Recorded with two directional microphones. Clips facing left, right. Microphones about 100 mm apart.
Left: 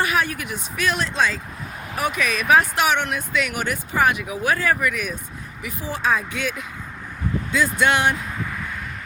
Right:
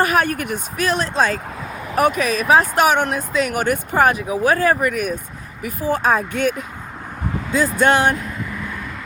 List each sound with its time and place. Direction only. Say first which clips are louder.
0.0 s speech: right 5 dB; 45° right (ahead or behind)
0.9 s speech: right 3 dB; 35° right (ahead or behind)